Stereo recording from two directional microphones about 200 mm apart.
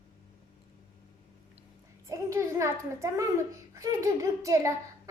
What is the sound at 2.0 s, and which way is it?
A child's voice, 15° right (ahead or behind).